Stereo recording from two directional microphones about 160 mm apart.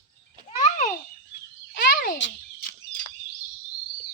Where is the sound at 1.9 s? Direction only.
60° left (ahead or behind).